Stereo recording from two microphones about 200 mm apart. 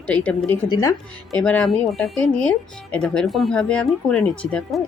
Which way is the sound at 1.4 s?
5° left (ahead or behind).